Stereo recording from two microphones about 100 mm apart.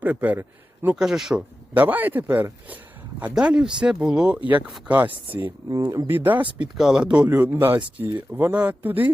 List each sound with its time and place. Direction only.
0.0 s a man's voice: 15° right (ahead or behind)
0.9 s speech: 5° right (ahead or behind)
1.7 s speech: 15° right (ahead or behind)
6.7 s speech: 5° right (ahead or behind)
7.3 s speech: 20° right (ahead or behind)